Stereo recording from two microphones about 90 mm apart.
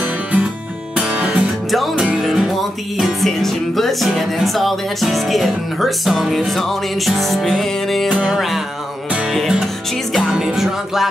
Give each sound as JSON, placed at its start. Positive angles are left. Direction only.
{"t": 0.0, "sound": "music", "side_deg": -15}
{"t": 1.7, "sound": "music", "side_deg": 0}
{"t": 8.1, "sound": "music", "side_deg": -15}
{"t": 8.4, "sound": "music", "side_deg": 0}